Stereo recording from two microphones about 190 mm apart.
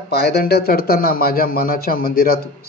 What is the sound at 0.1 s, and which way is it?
A man's voice, 60° left (ahead or behind).